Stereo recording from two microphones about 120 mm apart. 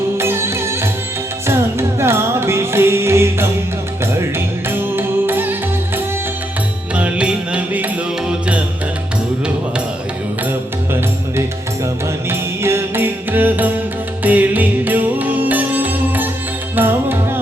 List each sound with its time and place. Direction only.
0.2 s music: 20° right (ahead or behind)
2.0 s music: 20° right (ahead or behind)
6.9 s music: 10° right (ahead or behind)
12.3 s music: 20° right (ahead or behind)